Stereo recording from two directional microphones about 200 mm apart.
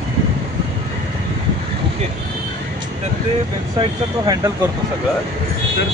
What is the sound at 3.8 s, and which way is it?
Speech, 20° right (ahead or behind).